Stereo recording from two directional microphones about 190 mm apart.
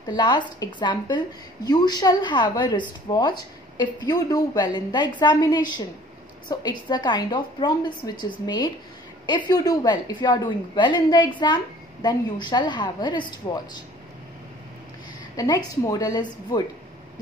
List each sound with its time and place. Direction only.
0.0 s a woman's voice: 20° left (ahead or behind)
15.3 s a woman's voice: 20° left (ahead or behind)